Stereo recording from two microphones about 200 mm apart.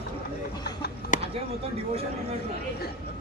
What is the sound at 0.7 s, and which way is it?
Speech, 50° left (ahead or behind).